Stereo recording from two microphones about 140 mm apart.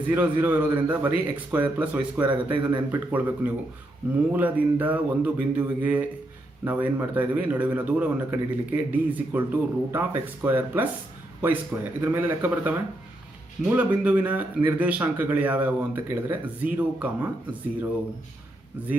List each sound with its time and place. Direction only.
0.1 s a man's voice: 10° right (ahead or behind)
2.2 s speech: 35° right (ahead or behind)
2.6 s a man's voice: 10° right (ahead or behind)
13.7 s a man's voice: 10° right (ahead or behind)
18.8 s a man's voice: 10° right (ahead or behind)